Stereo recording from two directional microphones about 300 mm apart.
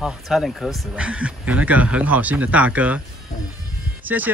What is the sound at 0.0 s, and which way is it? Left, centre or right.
Speech, centre.